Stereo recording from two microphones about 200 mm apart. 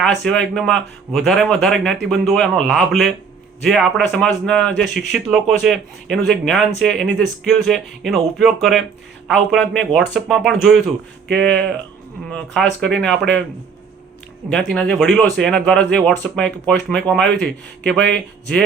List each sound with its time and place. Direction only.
0.3 s a man's voice: 5° left (ahead or behind)
14.5 s a man's voice: 5° left (ahead or behind)